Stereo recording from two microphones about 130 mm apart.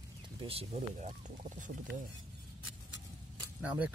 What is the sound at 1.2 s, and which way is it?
Speech, 80° right.